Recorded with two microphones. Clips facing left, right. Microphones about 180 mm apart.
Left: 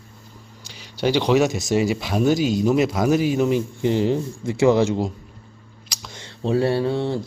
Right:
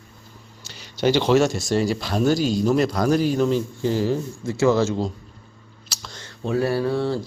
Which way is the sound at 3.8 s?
20° left (ahead or behind).